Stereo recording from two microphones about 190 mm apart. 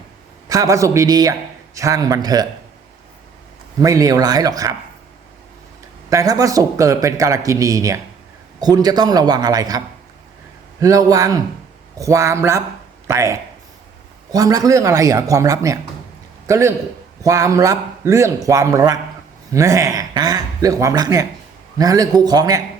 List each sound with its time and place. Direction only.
0.4 s a man's voice: 20° right (ahead or behind)
3.8 s a man's voice: 15° right (ahead or behind)
6.1 s a man's voice: 15° right (ahead or behind)